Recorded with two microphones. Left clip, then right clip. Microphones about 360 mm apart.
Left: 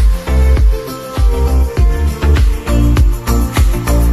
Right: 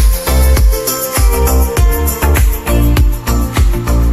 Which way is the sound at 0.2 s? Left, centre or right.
Right.